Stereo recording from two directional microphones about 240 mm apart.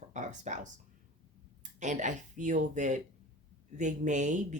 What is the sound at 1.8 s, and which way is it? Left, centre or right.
Speech, right.